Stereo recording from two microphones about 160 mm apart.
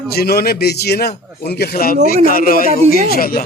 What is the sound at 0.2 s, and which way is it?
Speech, 75° left (ahead or behind).